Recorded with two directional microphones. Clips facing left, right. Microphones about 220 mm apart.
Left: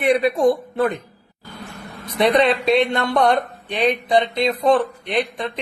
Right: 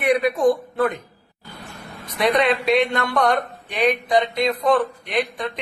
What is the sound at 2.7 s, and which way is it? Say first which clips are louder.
A man's voice: left 2 dB; 25° left (ahead or behind).